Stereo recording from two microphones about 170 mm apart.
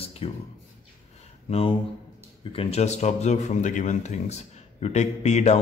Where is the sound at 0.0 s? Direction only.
35° left (ahead or behind).